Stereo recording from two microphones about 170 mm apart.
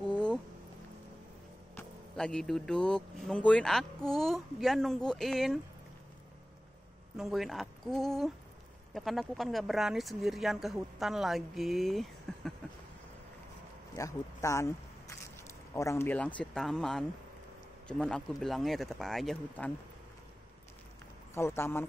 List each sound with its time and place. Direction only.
0.1 s a sound: 5° left (ahead or behind)
1.8 s speech: 5° left (ahead or behind)
7.2 s speech: centre (ahead or behind)
13.9 s speech: 20° left (ahead or behind); by 19.7 s centre (ahead or behind)
21.4 s speech: 15° left (ahead or behind)